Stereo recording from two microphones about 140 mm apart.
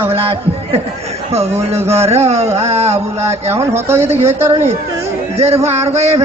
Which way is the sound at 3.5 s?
15° right (ahead or behind).